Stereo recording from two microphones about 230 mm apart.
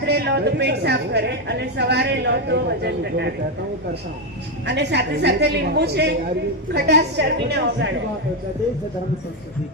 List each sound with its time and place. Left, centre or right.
0.0 s a woman's voice: right
4.6 s a woman's voice: right